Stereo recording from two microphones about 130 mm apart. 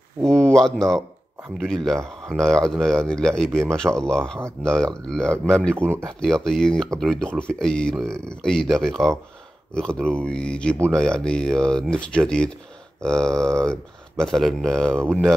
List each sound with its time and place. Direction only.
0.2 s speech: 5° left (ahead or behind)
2.0 s speech: 5° left (ahead or behind)
5.8 s speech: 20° right (ahead or behind)
6.2 s speech: 5° left (ahead or behind)